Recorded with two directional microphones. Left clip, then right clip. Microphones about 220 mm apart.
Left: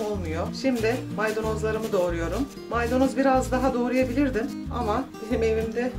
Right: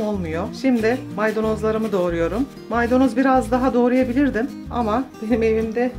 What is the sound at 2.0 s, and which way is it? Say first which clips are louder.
Speech: right 6 dB; 45° right (ahead or behind).